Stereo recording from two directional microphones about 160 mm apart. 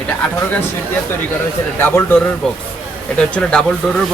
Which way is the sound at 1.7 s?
15° left (ahead or behind).